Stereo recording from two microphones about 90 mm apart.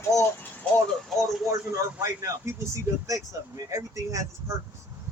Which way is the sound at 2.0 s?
35° right (ahead or behind).